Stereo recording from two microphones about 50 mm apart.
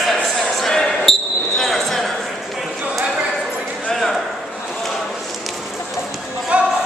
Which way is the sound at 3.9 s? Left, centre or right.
Centre.